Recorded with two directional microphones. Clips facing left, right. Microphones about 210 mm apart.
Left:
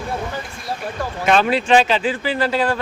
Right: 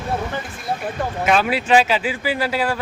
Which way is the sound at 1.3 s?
5° right (ahead or behind).